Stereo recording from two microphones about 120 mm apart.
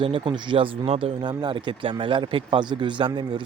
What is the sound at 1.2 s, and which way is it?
Speech, 40° right (ahead or behind).